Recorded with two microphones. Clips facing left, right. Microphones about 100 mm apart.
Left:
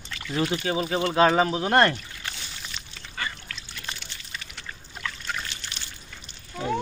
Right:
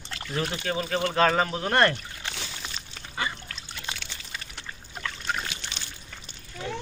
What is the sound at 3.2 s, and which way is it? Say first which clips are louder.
Goose: right 2 dB; 20° right (ahead or behind).